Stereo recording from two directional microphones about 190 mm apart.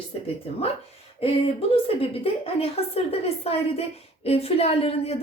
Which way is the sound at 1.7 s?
30° left (ahead or behind).